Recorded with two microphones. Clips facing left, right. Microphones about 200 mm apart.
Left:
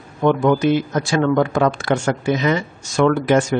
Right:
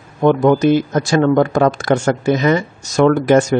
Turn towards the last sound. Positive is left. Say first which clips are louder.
# right 4 dB
turn(degrees=-40)  # may be behind; listen again after turning